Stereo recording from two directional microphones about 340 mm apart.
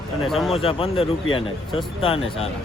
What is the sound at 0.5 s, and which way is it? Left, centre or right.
Speech, centre.